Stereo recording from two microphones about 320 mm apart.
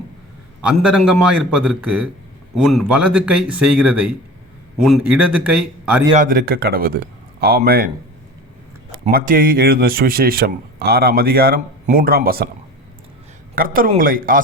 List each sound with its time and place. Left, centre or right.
0.6 s speech: centre
6.1 s speech: right
9.1 s speech: right
13.6 s speech: right